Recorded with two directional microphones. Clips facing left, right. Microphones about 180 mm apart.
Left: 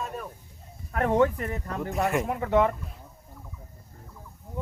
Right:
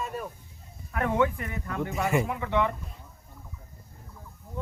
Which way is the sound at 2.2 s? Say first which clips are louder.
Left 4 dB; 45° left (ahead or behind).